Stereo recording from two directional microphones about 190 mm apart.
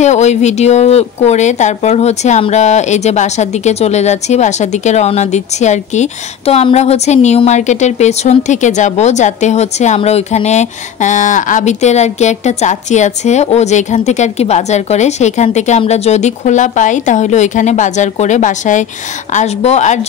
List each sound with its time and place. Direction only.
0.0 s a woman's voice: 35° left (ahead or behind)